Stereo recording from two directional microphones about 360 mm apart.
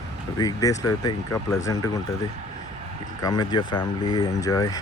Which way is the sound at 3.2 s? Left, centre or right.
Centre.